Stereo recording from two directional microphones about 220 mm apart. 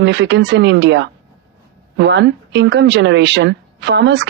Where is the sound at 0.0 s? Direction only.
50° right (ahead or behind).